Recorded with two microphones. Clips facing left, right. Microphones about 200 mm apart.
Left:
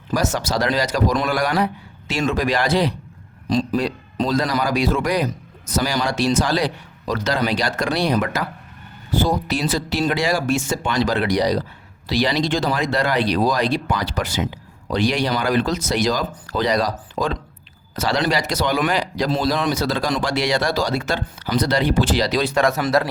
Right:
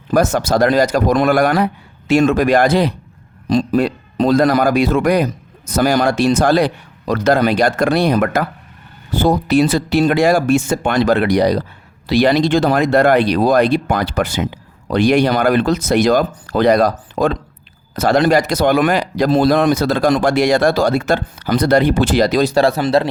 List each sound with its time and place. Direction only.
0.1 s a man's voice: 55° right (ahead or behind); by 23.0 s 30° right (ahead or behind)